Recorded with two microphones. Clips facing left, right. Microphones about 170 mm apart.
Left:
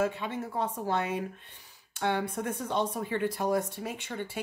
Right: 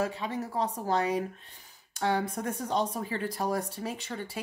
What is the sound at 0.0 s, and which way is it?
Speech, 35° right (ahead or behind).